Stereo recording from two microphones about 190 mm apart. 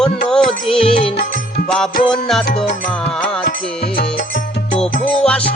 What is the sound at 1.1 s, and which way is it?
Music, 50° left (ahead or behind).